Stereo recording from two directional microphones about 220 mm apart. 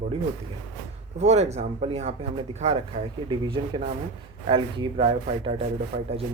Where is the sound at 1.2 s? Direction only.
30° right (ahead or behind).